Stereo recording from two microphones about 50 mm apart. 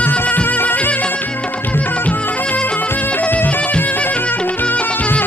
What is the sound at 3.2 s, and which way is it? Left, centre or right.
Music, left.